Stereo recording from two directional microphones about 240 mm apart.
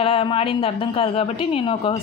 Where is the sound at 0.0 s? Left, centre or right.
Left.